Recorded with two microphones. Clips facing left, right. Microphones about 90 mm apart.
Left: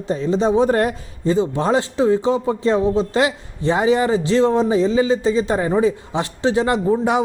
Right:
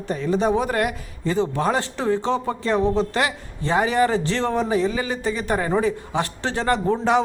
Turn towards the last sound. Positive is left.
turn(degrees=15)  # may be behind; listen again after turning